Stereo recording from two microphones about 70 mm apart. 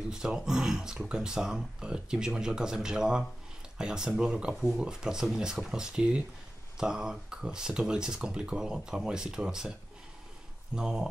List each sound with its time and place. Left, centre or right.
0.1 s speech: centre
10.8 s speech: centre